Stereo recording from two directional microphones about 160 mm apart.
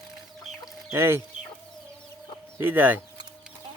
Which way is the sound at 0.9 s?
15° right (ahead or behind).